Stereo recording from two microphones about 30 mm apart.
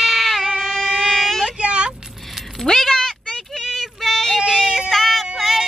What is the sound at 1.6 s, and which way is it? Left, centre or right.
Vehicle, right.